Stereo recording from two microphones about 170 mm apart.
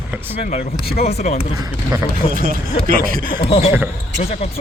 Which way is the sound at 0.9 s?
40° left (ahead or behind).